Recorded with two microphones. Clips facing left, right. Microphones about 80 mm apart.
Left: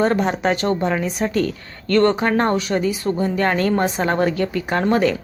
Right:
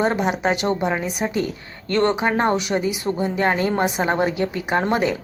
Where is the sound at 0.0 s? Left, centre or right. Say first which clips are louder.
Left 2 dB; centre.